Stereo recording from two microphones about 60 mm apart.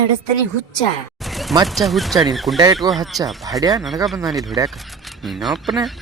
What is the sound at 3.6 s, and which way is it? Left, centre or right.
Speech, right.